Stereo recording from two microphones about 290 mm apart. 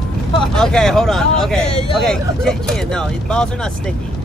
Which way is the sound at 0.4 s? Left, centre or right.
Centre.